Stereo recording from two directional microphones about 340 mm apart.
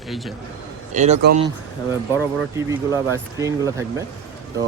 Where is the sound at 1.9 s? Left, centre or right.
Centre.